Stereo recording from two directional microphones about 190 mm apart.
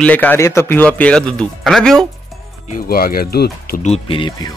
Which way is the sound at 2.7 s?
50° left (ahead or behind).